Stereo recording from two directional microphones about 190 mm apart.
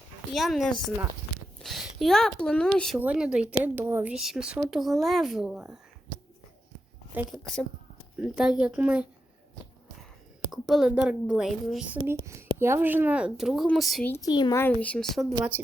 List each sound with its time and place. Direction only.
0.3 s speech: centre (ahead or behind)
7.2 s speech: centre (ahead or behind)
10.5 s speech: centre (ahead or behind)
12.1 s a woman's voice: 15° right (ahead or behind)
14.1 s speech: 20° left (ahead or behind)
14.6 s speech: 10° left (ahead or behind)